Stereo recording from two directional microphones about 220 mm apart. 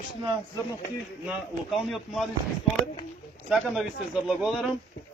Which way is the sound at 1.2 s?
5° right (ahead or behind).